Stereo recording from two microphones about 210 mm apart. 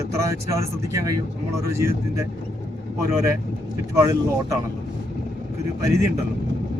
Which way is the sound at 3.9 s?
15° right (ahead or behind).